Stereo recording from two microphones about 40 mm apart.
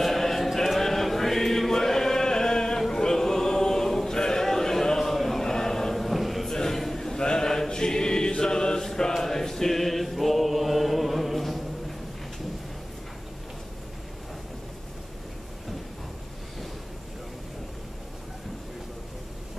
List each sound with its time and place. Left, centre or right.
0.0 s choir: centre
0.6 s chant: centre
6.5 s chant: centre
8.8 s mantra: centre
9.1 s chant: centre